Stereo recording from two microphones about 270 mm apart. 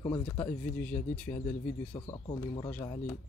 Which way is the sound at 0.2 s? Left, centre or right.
Centre.